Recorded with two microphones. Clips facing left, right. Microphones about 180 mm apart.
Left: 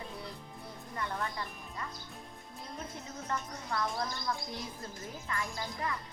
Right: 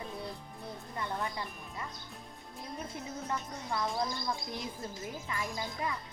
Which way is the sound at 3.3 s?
15° right (ahead or behind).